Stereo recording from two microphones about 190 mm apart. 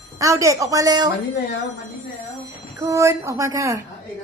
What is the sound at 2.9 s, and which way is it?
Speech, 15° right (ahead or behind).